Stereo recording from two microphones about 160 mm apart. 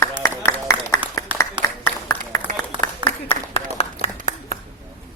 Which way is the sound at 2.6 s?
30° left (ahead or behind).